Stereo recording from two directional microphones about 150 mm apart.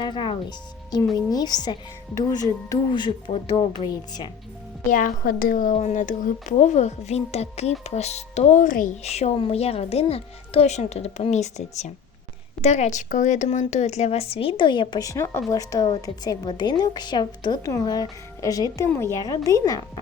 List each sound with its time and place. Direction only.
0.0 s a woman's voice: 30° left (ahead or behind)
4.9 s a woman's voice: 60° left (ahead or behind)
5.7 s a woman's voice: 50° left (ahead or behind)
9.0 s a woman's voice: 45° left (ahead or behind); by 19.8 s 25° left (ahead or behind)